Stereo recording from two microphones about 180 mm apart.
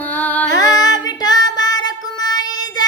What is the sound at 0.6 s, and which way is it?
Child singing, 20° left (ahead or behind).